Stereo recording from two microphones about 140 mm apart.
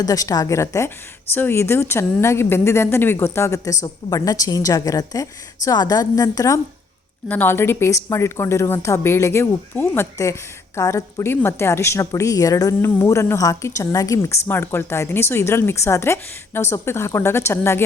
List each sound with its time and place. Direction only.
0.0 s a woman's voice: 25° left (ahead or behind)
7.3 s speech: 15° left (ahead or behind)